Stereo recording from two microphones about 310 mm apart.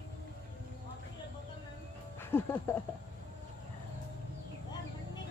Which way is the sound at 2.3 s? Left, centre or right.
Centre.